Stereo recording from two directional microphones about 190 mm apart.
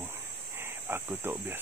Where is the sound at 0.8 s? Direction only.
10° right (ahead or behind).